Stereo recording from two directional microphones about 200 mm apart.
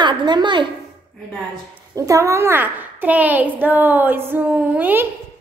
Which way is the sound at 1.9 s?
15° right (ahead or behind).